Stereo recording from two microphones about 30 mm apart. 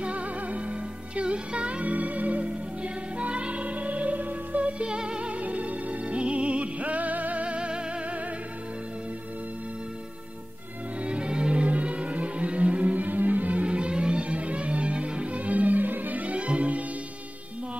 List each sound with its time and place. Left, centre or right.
0.0 s music: right
1.8 s music: right
2.4 s music: right
4.8 s music: right
5.3 s music: right
7.4 s music: right
11.1 s music: right
11.6 s music: right
13.7 s music: right
16.3 s music: right